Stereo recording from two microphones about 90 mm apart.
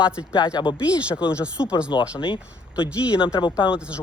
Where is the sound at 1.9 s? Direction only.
55° left (ahead or behind).